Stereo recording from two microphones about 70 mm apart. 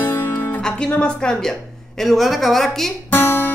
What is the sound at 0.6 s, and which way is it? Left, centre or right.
A woman's voice, centre.